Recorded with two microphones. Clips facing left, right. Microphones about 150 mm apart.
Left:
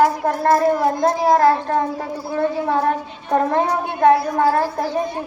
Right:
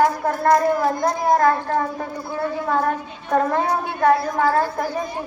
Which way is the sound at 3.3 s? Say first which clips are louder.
Left 2 dB; 20° left (ahead or behind).